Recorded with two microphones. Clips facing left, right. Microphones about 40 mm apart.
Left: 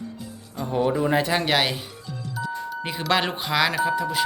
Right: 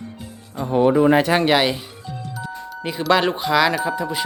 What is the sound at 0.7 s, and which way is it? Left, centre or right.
Speech, right.